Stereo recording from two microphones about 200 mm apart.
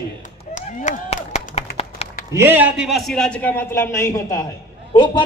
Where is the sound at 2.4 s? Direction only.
10° right (ahead or behind).